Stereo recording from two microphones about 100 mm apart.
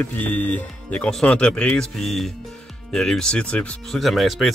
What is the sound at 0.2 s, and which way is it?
Speech, 15° left (ahead or behind).